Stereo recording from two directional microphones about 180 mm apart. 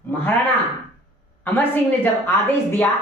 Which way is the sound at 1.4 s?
10° left (ahead or behind).